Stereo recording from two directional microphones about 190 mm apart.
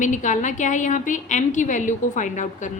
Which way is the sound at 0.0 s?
40° left (ahead or behind).